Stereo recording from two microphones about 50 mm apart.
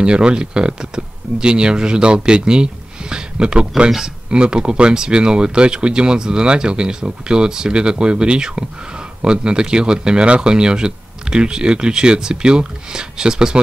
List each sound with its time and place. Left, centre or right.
0.0 s speech: centre